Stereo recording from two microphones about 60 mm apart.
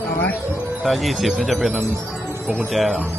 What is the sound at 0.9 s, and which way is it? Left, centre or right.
Speech, centre.